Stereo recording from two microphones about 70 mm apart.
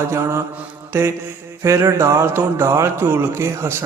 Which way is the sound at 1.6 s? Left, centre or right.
Right.